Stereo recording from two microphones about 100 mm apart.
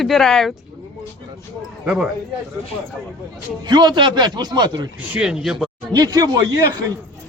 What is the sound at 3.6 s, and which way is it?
A man's voice, 50° right (ahead or behind).